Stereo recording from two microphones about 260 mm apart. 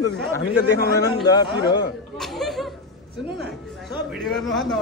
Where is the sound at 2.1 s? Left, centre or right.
Centre.